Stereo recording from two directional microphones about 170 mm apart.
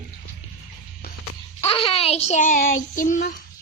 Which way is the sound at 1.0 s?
65° left (ahead or behind).